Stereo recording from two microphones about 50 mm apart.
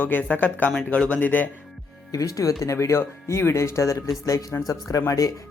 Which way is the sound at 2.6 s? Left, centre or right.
Left.